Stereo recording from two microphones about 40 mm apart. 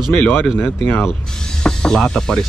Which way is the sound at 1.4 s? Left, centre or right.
Centre.